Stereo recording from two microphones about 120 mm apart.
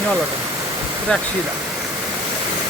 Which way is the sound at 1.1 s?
10° left (ahead or behind).